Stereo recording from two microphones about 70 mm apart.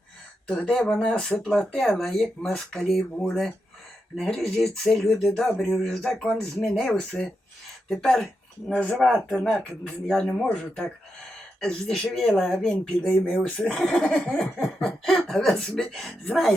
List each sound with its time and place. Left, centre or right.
0.4 s speech: centre
9.0 s speech: centre